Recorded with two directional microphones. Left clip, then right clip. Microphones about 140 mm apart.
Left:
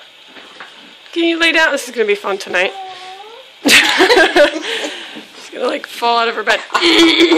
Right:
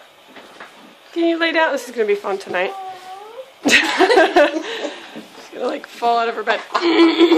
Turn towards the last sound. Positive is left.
turn(degrees=0)  # may be behind; listen again after turning